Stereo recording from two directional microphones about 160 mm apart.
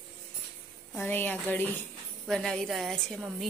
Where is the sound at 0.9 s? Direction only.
10° left (ahead or behind).